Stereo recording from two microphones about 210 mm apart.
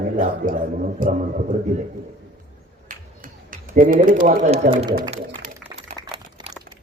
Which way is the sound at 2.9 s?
40° right (ahead or behind).